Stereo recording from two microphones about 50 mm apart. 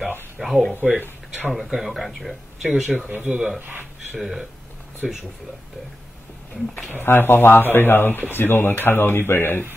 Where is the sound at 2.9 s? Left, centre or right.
Right.